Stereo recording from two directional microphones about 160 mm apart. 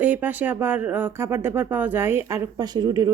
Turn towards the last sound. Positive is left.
turn(degrees=-25)  # may be behind; listen again after turning